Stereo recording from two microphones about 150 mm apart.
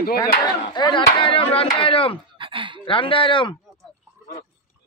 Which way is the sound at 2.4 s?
35° right (ahead or behind).